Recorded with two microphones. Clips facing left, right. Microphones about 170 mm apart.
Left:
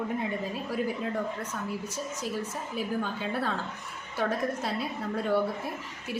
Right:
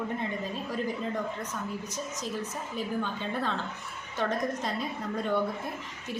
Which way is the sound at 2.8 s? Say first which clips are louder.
Left 1 dB; 10° left (ahead or behind).